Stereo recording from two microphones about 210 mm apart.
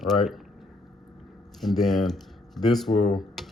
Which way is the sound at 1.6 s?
Centre (ahead or behind).